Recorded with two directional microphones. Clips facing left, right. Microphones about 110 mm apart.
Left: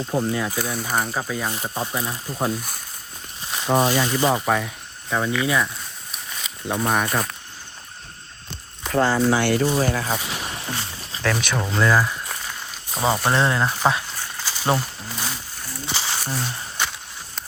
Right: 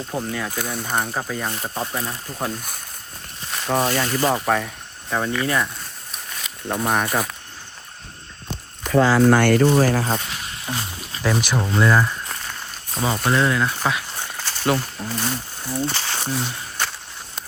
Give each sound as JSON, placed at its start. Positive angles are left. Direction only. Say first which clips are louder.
{"t": 0.1, "sound": "speech", "louder": "left 4 dB", "side_deg": 15}
{"t": 9.3, "sound": "speech", "louder": "right 4 dB", "side_deg": -55}
{"t": 10.1, "sound": "speech", "louder": "right 2 dB", "side_deg": 5}
{"t": 10.7, "sound": "music", "louder": "right 2 dB", "side_deg": -5}
{"t": 13.3, "sound": "speech", "louder": "right 1 dB", "side_deg": 25}
{"t": 14.4, "sound": "a sound", "louder": "right 2 dB", "side_deg": 0}
{"t": 14.8, "sound": "speech", "louder": "right 3 dB", "side_deg": 0}